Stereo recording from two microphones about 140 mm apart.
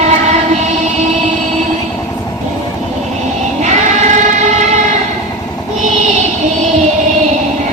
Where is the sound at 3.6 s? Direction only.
60° right (ahead or behind).